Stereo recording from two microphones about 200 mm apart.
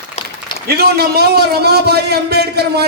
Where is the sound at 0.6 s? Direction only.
55° right (ahead or behind).